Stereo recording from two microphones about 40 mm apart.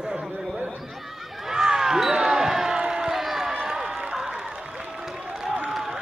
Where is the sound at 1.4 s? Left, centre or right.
Centre.